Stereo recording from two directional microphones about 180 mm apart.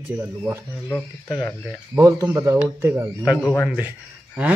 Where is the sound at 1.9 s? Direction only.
20° right (ahead or behind).